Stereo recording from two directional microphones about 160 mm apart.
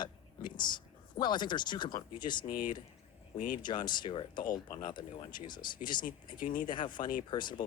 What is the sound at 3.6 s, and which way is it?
Speech, 30° left (ahead or behind).